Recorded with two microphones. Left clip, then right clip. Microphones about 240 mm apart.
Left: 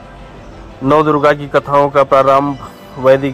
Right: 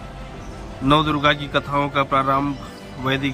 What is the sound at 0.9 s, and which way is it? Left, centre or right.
Speech, left.